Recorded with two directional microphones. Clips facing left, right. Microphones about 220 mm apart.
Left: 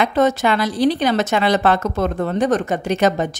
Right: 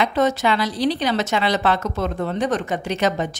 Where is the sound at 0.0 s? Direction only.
50° left (ahead or behind).